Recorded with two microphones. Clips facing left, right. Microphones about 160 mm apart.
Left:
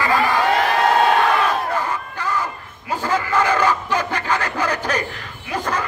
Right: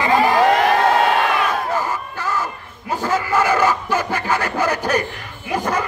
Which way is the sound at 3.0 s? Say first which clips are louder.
Right 1 dB; 10° right (ahead or behind).